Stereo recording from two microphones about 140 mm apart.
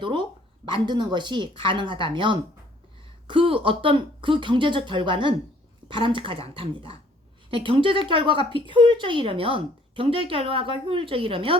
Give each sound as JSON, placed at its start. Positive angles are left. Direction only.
{"t": 0.0, "sound": "speech", "side_deg": -35}